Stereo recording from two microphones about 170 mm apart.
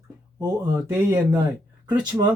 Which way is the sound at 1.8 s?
25° right (ahead or behind).